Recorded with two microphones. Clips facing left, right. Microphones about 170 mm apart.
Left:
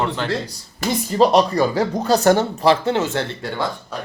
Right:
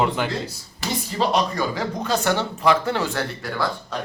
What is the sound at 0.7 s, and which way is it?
Speech, 40° left (ahead or behind).